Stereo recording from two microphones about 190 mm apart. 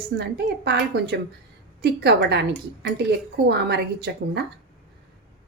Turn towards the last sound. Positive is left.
turn(degrees=-60)  # may be behind; listen again after turning